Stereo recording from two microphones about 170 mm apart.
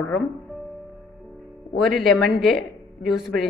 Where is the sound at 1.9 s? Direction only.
Centre (ahead or behind).